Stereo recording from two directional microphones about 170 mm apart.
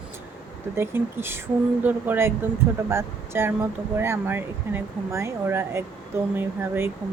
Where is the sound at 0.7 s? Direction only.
15° right (ahead or behind).